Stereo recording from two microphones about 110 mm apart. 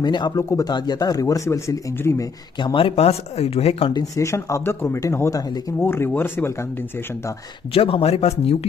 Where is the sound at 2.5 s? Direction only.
50° left (ahead or behind); by 3.9 s 70° left (ahead or behind).